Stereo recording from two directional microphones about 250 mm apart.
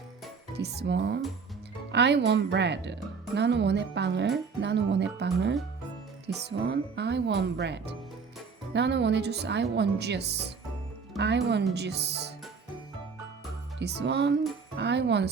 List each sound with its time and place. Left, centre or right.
0.5 s speech: right
13.7 s speech: right